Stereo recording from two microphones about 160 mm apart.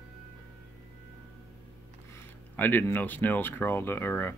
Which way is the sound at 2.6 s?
15° left (ahead or behind).